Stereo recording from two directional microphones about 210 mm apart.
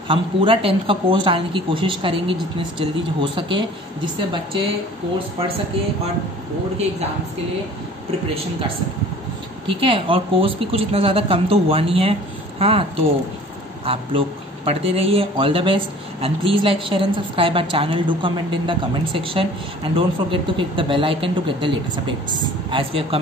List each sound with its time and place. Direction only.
0.1 s speech: 25° right (ahead or behind)
9.7 s speech: 25° right (ahead or behind)
13.8 s speech: 25° right (ahead or behind)